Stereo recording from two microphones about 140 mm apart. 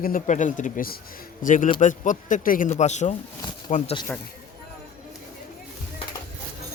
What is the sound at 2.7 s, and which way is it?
A man's voice, 55° left (ahead or behind).